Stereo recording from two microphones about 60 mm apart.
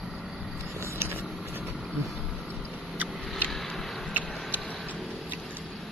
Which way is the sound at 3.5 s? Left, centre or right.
Centre.